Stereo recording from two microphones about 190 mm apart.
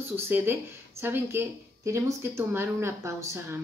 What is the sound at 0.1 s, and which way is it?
Speech, 10° right (ahead or behind).